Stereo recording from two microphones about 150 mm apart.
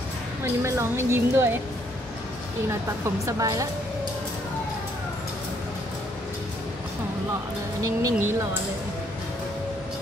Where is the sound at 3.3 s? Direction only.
20° right (ahead or behind).